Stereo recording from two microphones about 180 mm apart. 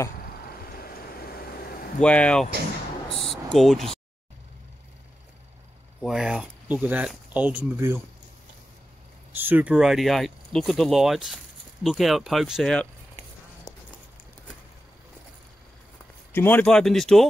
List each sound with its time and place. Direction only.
0.7 s vehicle: 55° left (ahead or behind)
2.0 s speech: 5° left (ahead or behind)
3.1 s a sound: centre (ahead or behind)
5.9 s speech: centre (ahead or behind)
9.3 s speech: 10° right (ahead or behind)
16.3 s speech: 10° left (ahead or behind)